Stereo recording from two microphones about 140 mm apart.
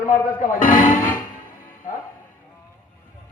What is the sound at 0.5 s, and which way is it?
Speech, 75° left (ahead or behind).